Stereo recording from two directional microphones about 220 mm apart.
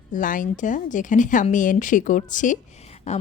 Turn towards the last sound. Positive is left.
turn(degrees=30)  # may be behind; listen again after turning